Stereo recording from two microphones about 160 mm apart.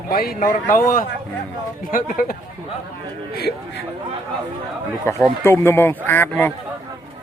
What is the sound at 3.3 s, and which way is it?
Speech, 85° left.